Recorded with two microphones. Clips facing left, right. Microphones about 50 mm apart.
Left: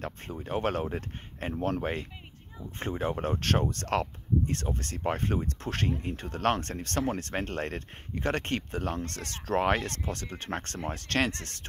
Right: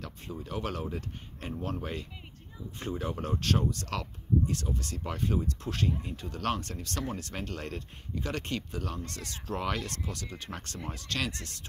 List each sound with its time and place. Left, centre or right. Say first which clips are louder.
0.0 s speech: left 3 dB; left